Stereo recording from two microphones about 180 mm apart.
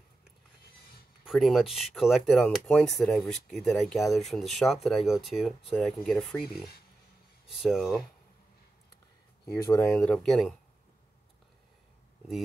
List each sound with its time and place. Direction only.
1.2 s speech: centre (ahead or behind)
9.6 s speech: 15° left (ahead or behind)
9.9 s speech: 5° left (ahead or behind)